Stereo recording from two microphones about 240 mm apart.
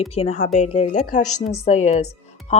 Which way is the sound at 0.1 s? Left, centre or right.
Left.